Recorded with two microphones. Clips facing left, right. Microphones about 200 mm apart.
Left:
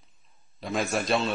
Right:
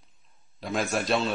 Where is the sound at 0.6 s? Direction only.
Centre (ahead or behind).